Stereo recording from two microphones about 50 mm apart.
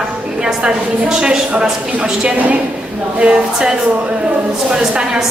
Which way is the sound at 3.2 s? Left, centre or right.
Centre.